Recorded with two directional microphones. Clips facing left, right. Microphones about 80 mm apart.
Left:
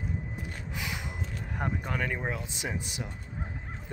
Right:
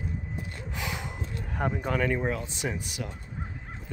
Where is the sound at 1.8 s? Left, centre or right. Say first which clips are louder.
Right 5 dB; centre.